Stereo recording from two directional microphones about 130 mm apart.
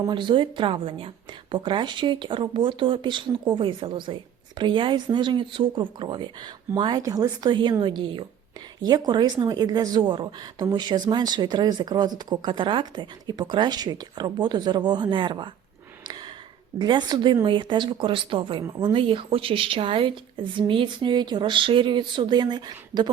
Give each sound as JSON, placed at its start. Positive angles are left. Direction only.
{"t": 0.1, "sound": "a woman's voice", "side_deg": -40}
{"t": 16.0, "sound": "a sound", "side_deg": -35}
{"t": 16.7, "sound": "a woman's voice", "side_deg": -35}